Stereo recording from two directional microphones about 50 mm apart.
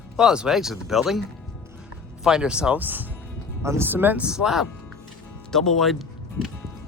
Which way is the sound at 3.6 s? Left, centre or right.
Right.